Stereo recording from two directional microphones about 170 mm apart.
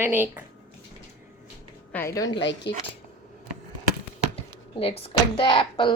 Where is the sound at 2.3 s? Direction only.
90° left.